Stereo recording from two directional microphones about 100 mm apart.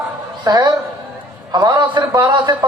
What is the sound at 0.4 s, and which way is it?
A man's voice, 45° right (ahead or behind).